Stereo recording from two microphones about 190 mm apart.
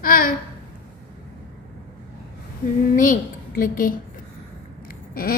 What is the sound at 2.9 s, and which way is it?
A woman's voice, 45° left (ahead or behind).